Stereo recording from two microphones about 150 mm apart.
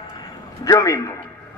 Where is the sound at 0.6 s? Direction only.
20° left (ahead or behind).